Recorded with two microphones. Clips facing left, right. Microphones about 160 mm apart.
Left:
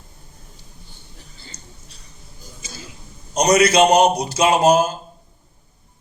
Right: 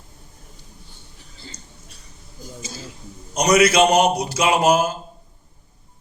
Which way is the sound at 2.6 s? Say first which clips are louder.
Right 3 dB; 35° right (ahead or behind).